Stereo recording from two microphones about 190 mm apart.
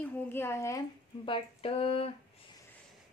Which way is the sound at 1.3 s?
30° left (ahead or behind).